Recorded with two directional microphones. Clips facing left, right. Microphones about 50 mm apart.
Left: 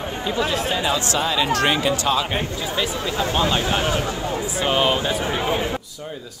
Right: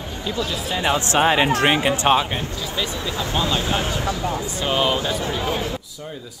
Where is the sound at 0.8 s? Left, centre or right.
Right.